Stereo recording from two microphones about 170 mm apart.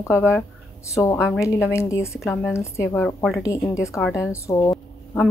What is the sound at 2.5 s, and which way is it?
Speech, 15° left (ahead or behind).